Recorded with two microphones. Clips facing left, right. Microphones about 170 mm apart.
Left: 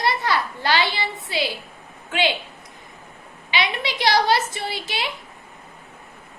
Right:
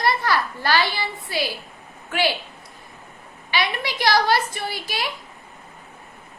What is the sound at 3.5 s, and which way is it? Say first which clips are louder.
A woman's voice: even; 20° left (ahead or behind).